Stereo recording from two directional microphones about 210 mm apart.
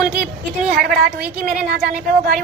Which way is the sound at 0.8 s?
45° right (ahead or behind).